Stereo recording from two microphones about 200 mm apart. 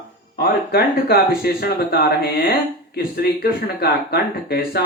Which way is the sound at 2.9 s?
50° left (ahead or behind).